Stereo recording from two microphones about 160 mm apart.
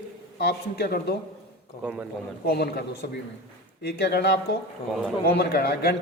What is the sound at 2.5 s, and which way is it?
Speech, 90° left.